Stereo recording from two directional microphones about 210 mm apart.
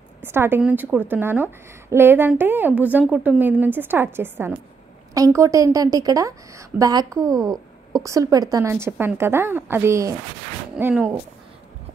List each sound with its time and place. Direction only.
0.2 s a woman's voice: 10° right (ahead or behind)